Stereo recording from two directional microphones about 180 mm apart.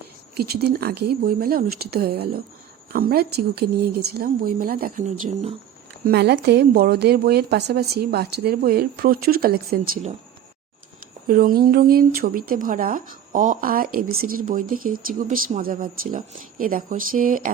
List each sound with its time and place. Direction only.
0.3 s a woman's voice: 60° right (ahead or behind); by 5.5 s 40° right (ahead or behind)
6.1 s a woman's voice: 65° right (ahead or behind)
11.3 s speech: 55° right (ahead or behind)